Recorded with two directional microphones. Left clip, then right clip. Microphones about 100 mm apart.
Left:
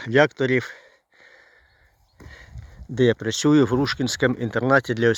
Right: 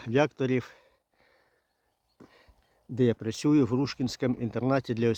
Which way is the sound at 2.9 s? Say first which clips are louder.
Left 7 dB; 20° left (ahead or behind).